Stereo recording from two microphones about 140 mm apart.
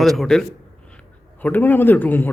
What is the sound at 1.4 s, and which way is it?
Speech, 10° left (ahead or behind).